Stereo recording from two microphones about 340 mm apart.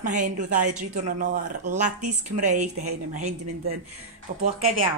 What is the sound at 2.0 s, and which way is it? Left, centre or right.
Speech, right.